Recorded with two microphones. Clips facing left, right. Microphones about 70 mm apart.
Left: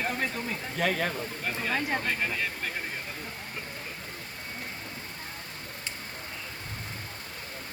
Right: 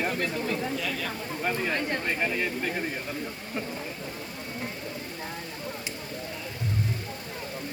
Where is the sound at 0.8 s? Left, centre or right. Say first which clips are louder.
Left 4 dB; left.